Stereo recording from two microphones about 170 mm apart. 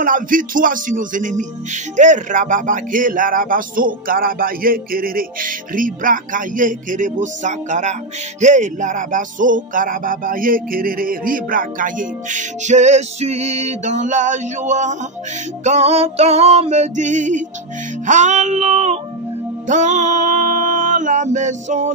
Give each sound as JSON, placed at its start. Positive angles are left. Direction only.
{"t": 0.0, "sound": "music", "side_deg": -55}